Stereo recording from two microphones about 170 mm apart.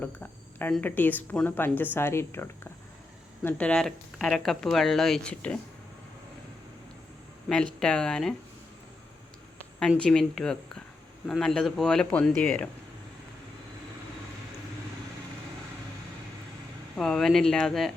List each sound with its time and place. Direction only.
0.0 s speech: 10° left (ahead or behind)
7.4 s speech: 5° left (ahead or behind)
10.0 s speech: 5° left (ahead or behind)
17.0 s speech: 5° left (ahead or behind)